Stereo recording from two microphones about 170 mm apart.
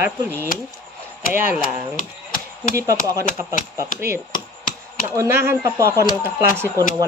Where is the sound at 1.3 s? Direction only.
10° right (ahead or behind).